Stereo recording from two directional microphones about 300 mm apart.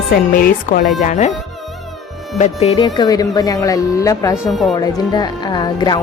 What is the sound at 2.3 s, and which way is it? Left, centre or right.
A woman's voice, left.